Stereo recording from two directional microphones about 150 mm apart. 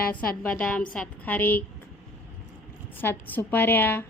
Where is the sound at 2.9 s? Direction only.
15° left (ahead or behind).